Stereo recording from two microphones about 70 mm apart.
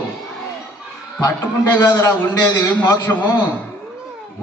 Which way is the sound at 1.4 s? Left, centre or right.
Left.